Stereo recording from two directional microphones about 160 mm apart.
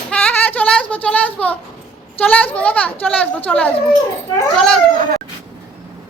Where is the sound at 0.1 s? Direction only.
10° left (ahead or behind).